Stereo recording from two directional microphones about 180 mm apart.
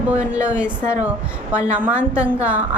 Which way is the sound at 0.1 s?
10° right (ahead or behind).